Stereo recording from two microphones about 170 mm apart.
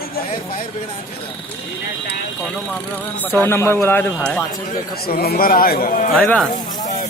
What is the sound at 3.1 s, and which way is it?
A man's voice, 10° left (ahead or behind).